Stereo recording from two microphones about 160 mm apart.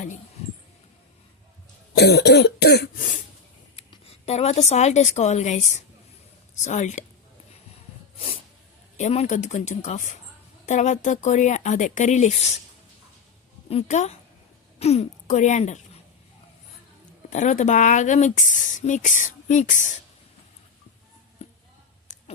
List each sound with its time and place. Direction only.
2.0 s cough: 90° left
3.8 s speech: 40° left (ahead or behind)
9.0 s speech: 45° left (ahead or behind)
13.7 s speech: 45° left (ahead or behind)
17.2 s speech: 50° left (ahead or behind)